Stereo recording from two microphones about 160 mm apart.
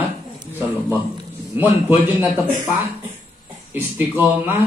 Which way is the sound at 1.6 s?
15° right (ahead or behind).